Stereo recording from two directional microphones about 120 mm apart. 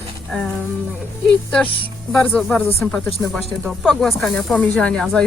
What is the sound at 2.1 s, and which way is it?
Speech, 5° left (ahead or behind).